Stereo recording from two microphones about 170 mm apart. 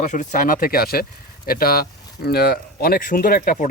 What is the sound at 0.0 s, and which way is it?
Speech, 45° left (ahead or behind).